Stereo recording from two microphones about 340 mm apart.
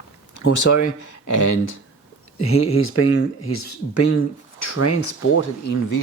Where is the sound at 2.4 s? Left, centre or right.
Left.